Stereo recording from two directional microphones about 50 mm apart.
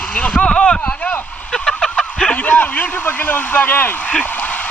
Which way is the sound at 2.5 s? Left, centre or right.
Left.